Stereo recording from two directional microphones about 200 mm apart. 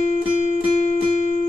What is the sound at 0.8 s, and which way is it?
Music, 35° left (ahead or behind).